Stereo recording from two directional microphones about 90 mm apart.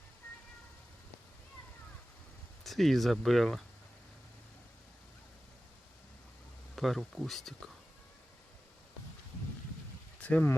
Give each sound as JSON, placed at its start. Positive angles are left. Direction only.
{"t": 2.6, "sound": "speech", "side_deg": 0}
{"t": 6.7, "sound": "speech", "side_deg": 0}
{"t": 10.2, "sound": "speech", "side_deg": 15}